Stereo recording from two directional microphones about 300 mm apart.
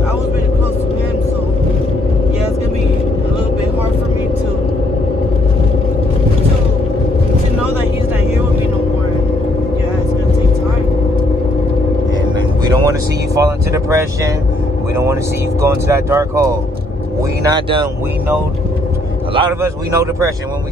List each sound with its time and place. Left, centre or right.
12.8 s speech: centre
15.6 s speech: centre
19.3 s speech: centre